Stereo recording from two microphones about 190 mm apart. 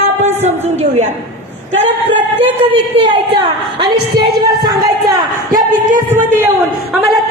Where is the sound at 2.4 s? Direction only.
30° right (ahead or behind).